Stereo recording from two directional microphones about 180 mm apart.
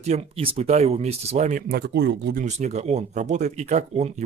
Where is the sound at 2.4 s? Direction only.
40° right (ahead or behind).